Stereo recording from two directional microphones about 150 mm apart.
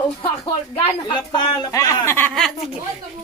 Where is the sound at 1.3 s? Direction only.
25° left (ahead or behind).